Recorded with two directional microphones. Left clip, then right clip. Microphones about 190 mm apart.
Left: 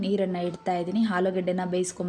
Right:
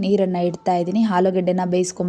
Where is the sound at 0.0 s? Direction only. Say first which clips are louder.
Right 8 dB; 10° right (ahead or behind).